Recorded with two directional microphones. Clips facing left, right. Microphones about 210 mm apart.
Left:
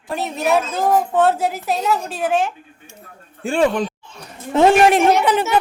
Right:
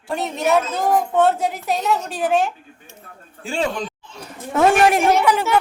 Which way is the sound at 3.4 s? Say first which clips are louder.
Left 6 dB; 55° left (ahead or behind).